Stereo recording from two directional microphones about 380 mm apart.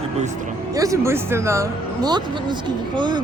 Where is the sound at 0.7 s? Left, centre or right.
Centre.